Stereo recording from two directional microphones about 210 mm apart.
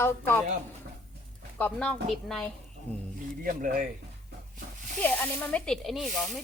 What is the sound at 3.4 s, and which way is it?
Speech, 40° right (ahead or behind).